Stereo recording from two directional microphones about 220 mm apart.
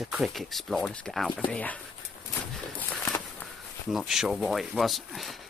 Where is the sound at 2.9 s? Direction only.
5° left (ahead or behind).